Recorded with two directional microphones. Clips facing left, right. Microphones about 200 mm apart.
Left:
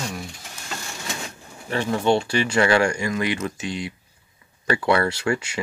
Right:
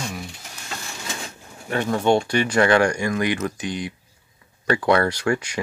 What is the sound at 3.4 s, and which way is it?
Speech, 25° left (ahead or behind).